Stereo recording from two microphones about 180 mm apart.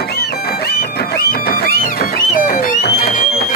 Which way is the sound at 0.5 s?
60° left (ahead or behind).